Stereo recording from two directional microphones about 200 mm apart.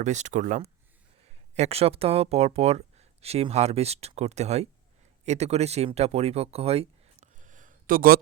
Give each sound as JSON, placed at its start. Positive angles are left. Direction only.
{"t": 0.0, "sound": "speech", "side_deg": -35}